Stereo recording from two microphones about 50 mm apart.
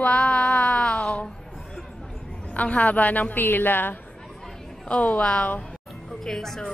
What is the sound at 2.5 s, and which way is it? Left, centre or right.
A woman's voice, left.